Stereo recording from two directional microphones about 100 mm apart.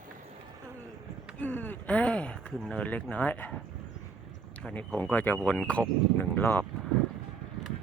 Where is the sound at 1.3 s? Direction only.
15° left (ahead or behind).